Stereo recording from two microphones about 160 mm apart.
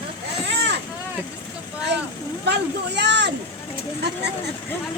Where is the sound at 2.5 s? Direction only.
90° right.